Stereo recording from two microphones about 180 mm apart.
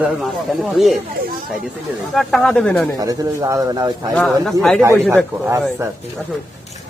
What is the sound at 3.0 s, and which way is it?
Speech, 20° right (ahead or behind).